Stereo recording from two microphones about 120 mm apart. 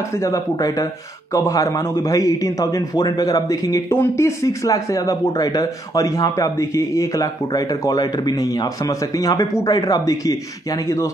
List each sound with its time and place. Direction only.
0.2 s a man's voice: 30° left (ahead or behind)